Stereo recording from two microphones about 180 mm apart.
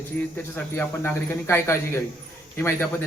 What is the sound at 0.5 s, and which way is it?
Speech, 10° left (ahead or behind).